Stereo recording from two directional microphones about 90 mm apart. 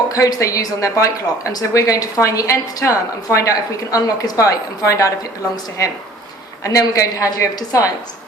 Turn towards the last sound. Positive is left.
turn(degrees=40)  # may be behind; listen again after turning